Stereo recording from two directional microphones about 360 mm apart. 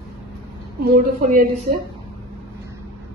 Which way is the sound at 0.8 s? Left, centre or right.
Right.